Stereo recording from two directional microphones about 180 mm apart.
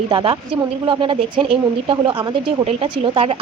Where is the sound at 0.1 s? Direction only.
30° right (ahead or behind).